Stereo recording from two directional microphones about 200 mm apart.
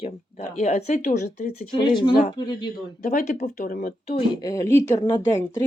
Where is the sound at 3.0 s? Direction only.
40° left (ahead or behind).